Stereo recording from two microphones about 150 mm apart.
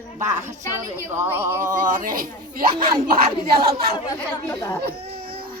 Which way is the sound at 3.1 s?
90° right.